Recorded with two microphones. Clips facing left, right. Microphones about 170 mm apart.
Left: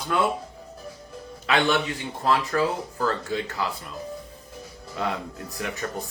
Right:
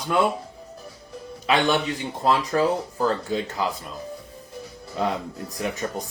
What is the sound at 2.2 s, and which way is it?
Speech, 20° right (ahead or behind).